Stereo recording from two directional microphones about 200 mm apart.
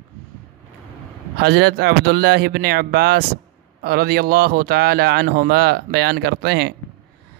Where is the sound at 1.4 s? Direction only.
55° right (ahead or behind).